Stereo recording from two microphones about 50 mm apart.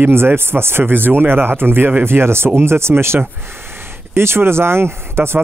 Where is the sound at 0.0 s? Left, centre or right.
Right.